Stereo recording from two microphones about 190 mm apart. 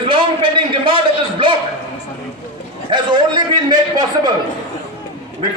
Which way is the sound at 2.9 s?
25° right (ahead or behind).